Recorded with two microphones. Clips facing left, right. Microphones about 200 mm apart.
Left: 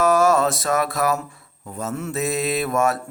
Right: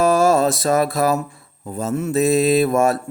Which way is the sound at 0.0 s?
30° right (ahead or behind).